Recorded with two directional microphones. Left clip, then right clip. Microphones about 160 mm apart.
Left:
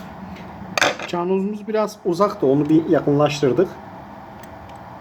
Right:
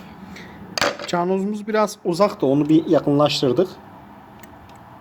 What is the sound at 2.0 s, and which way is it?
Speech, 45° right (ahead or behind).